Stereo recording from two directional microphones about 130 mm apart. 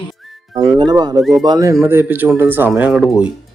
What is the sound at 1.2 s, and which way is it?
Speech, centre (ahead or behind).